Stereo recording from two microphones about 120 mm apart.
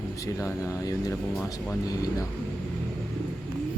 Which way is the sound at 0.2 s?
25° left (ahead or behind).